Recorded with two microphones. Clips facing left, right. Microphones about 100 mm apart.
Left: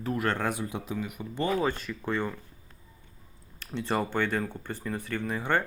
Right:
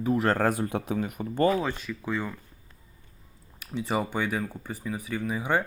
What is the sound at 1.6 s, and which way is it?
Speech, centre (ahead or behind).